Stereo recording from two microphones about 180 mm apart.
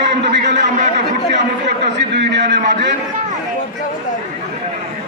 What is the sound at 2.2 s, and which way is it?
Speech, 75° right (ahead or behind).